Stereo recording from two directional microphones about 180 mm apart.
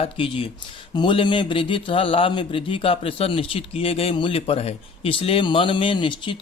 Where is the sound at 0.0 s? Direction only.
30° left (ahead or behind).